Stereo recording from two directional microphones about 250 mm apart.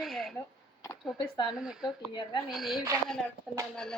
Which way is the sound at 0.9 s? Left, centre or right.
Centre.